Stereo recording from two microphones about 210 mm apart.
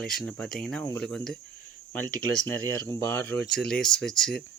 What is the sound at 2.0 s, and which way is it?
Speech, 75° right (ahead or behind).